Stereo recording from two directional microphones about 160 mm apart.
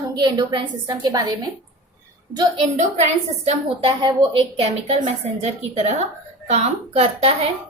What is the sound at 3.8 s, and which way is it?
A woman's voice, 35° right (ahead or behind).